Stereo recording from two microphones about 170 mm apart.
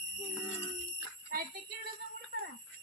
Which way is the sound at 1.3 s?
55° right (ahead or behind).